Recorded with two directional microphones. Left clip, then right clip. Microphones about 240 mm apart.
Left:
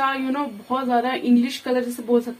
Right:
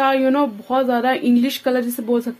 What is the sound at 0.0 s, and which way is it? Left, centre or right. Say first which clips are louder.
Speech: right 7 dB; right.